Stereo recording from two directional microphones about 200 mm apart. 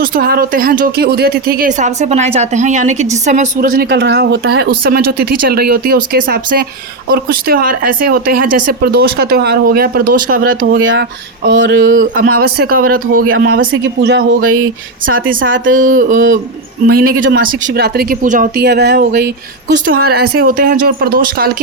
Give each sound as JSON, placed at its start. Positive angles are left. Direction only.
{"t": 0.0, "sound": "speech", "side_deg": -45}
{"t": 10.8, "sound": "speech", "side_deg": -70}
{"t": 12.4, "sound": "speech", "side_deg": -50}
{"t": 13.1, "sound": "speech", "side_deg": -85}
{"t": 13.8, "sound": "speech", "side_deg": -60}
{"t": 15.0, "sound": "speech", "side_deg": -45}
{"t": 15.4, "sound": "speech", "side_deg": -70}
{"t": 15.7, "sound": "a sound", "side_deg": -40}
{"t": 16.8, "sound": "speech", "side_deg": -45}
{"t": 19.8, "sound": "speech", "side_deg": -50}